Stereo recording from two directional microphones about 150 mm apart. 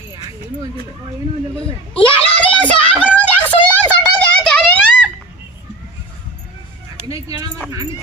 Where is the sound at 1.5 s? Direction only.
10° left (ahead or behind).